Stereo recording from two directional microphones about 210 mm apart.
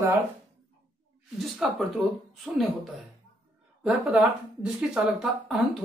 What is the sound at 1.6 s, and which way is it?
Speech, 5° right (ahead or behind).